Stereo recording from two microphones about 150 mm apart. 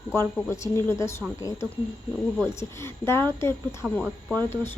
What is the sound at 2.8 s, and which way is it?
Speech, 15° left (ahead or behind).